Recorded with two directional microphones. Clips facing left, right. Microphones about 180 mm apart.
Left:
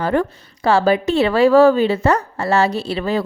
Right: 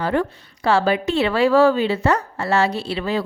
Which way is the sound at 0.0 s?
45° left (ahead or behind).